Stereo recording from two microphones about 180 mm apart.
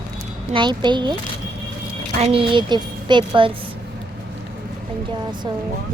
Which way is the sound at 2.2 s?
30° right (ahead or behind).